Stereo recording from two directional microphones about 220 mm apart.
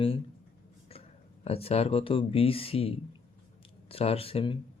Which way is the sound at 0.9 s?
25° left (ahead or behind).